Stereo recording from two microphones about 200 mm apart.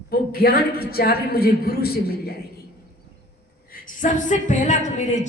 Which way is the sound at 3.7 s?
45° left (ahead or behind).